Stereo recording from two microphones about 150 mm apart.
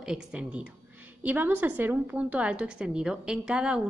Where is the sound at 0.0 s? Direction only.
5° right (ahead or behind).